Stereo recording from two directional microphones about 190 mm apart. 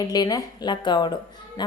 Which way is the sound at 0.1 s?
20° left (ahead or behind).